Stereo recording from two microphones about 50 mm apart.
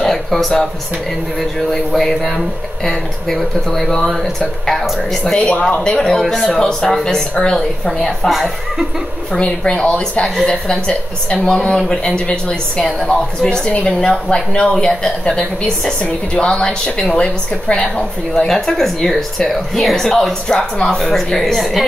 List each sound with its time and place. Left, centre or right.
0.0 s speech: centre
1.7 s speech: centre
5.4 s a woman's voice: left
5.9 s speech: centre
14.0 s a woman's voice: centre
16.0 s a woman's voice: centre
18.3 s speech: centre